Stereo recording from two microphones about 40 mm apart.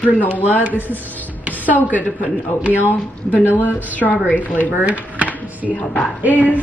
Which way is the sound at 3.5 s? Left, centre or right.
Left.